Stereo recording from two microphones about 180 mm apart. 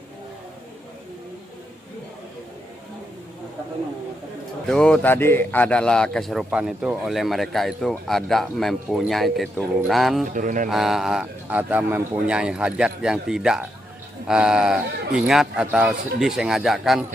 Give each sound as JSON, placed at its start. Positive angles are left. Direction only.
{"t": 4.6, "sound": "a man's voice", "side_deg": 5}
{"t": 10.3, "sound": "a sound", "side_deg": -45}
{"t": 10.7, "sound": "a man's voice", "side_deg": 0}